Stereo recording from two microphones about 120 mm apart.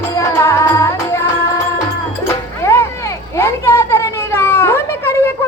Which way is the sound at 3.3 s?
20° left (ahead or behind).